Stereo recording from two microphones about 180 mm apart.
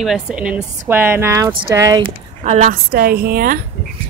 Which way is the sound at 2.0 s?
40° right (ahead or behind).